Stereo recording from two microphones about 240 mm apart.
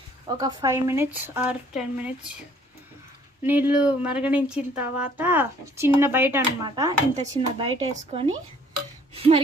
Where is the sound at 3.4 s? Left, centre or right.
Centre.